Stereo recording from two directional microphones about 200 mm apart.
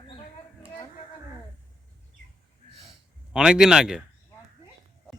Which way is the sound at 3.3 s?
5° right (ahead or behind).